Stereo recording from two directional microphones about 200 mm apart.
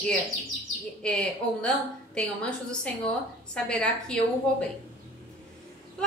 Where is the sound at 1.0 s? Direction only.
5° left (ahead or behind).